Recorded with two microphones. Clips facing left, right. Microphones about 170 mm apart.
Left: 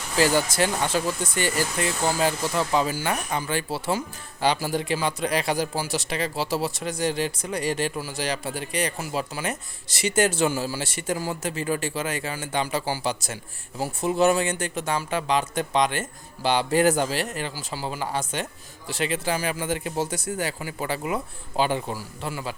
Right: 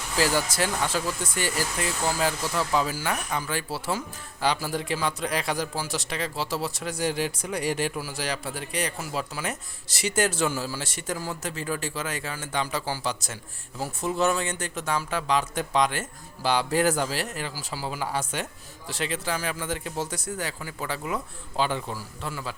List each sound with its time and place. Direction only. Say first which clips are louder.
0.9 s speech: left 3 dB; centre (ahead or behind)
2.4 s a man's voice: left 3 dB; 20° left (ahead or behind)
2.7 s speech: left 2 dB; centre (ahead or behind)